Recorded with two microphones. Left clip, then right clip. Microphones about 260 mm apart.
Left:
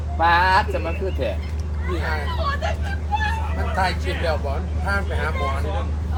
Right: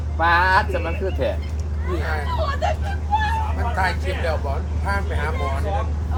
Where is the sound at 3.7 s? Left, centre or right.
Left.